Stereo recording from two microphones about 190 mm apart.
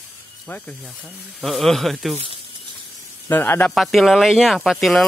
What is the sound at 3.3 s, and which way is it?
Speech, 10° left (ahead or behind).